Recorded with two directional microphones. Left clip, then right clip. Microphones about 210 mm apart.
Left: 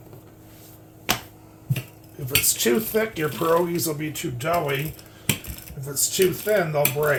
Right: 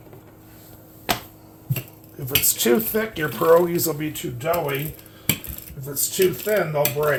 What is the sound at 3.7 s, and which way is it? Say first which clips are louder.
Speech: right 2 dB; 15° right (ahead or behind).